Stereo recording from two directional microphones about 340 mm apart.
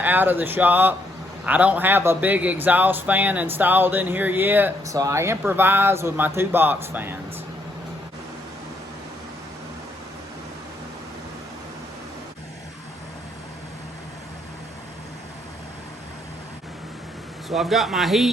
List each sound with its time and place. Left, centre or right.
0.0 s speech: centre
17.5 s speech: centre